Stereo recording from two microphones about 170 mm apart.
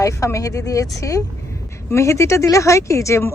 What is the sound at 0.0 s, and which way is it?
Speech, 20° left (ahead or behind).